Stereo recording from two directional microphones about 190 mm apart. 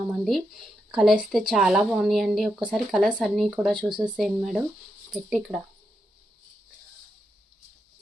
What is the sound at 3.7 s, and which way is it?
Speech, 25° right (ahead or behind).